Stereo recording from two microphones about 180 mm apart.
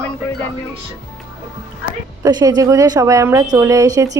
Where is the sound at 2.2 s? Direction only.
20° right (ahead or behind).